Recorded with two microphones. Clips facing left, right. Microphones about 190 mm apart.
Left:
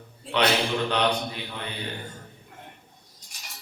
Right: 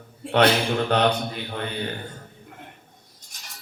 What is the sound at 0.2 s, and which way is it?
Speech, 50° right (ahead or behind).